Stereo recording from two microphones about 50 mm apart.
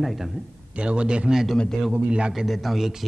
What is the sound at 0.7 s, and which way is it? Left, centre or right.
Speech, right.